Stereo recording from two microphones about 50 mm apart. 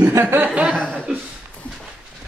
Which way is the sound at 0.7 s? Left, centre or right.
Centre.